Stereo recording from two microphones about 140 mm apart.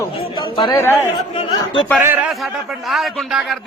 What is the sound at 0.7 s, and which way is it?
Speech, 15° left (ahead or behind).